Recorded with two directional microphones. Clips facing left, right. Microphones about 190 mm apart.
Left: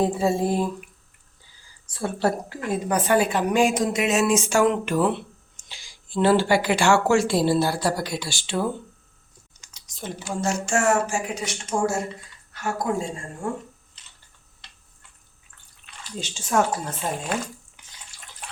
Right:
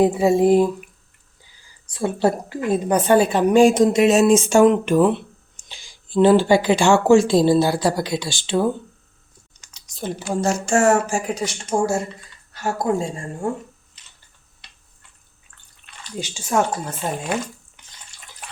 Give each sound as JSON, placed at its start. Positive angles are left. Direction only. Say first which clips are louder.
{"t": 0.0, "sound": "speech", "louder": "right 6 dB", "side_deg": -15}
{"t": 1.9, "sound": "a woman's voice", "louder": "right 4 dB", "side_deg": -20}
{"t": 9.7, "sound": "typing", "louder": "right 6 dB", "side_deg": -35}
{"t": 10.4, "sound": "speech", "louder": "right 5 dB", "side_deg": -40}
{"t": 16.1, "sound": "speech", "louder": "right 3 dB", "side_deg": -10}
{"t": 16.6, "sound": "speech", "louder": "right 2 dB", "side_deg": 5}